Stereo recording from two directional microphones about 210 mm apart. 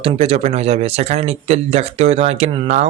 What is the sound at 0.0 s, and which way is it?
Speech, 30° right (ahead or behind).